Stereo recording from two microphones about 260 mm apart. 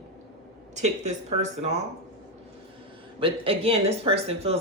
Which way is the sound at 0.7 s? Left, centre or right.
Right.